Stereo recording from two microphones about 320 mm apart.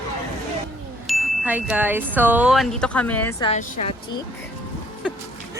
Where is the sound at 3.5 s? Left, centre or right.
Left.